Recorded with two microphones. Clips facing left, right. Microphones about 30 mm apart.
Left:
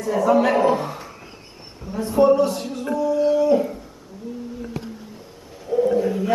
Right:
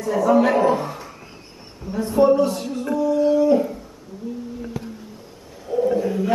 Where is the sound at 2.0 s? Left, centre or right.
Centre.